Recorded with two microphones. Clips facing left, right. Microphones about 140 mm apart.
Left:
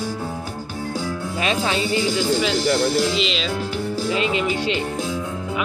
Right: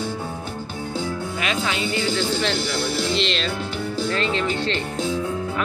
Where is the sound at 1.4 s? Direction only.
35° left (ahead or behind).